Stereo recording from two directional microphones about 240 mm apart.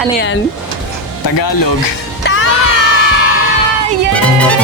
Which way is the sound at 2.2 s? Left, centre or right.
Left.